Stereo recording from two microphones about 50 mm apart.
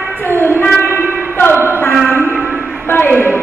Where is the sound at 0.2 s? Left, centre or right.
Left.